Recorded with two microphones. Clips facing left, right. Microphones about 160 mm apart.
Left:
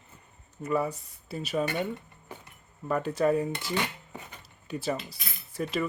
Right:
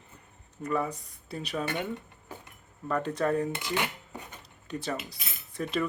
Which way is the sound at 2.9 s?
5° left (ahead or behind).